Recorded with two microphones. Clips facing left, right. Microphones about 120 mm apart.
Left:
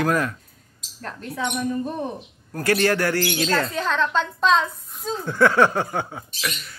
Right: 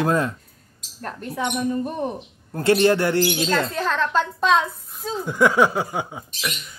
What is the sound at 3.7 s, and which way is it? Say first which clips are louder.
A woman's voice: right 1 dB; centre (ahead or behind).